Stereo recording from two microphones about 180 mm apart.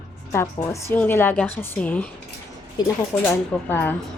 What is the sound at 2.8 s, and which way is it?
Speech, 20° left (ahead or behind).